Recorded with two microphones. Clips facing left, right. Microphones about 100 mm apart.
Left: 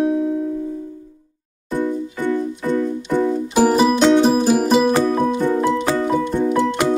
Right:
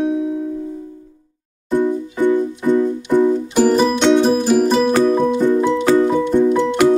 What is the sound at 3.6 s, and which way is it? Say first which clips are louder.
Music: even; 5° left (ahead or behind).